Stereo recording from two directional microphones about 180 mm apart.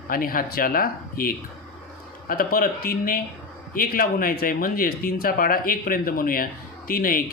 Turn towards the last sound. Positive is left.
turn(degrees=50)  # may be behind; listen again after turning